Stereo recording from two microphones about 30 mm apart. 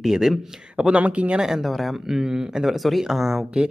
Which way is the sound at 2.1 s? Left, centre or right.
Centre.